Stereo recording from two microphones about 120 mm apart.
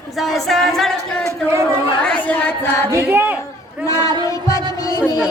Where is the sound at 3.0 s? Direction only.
20° right (ahead or behind).